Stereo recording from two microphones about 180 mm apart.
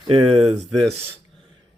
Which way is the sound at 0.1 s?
35° right (ahead or behind).